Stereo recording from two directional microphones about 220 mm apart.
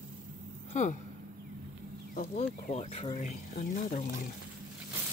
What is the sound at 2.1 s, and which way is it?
Speech, 30° left (ahead or behind).